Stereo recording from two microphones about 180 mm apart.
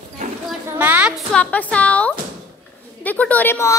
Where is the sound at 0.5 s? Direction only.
10° right (ahead or behind); by 2.1 s 5° left (ahead or behind).